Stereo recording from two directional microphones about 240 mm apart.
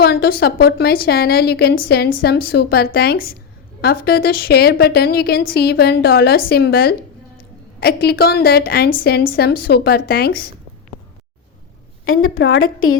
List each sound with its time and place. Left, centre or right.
0.0 s a woman's voice: left
12.0 s a woman's voice: left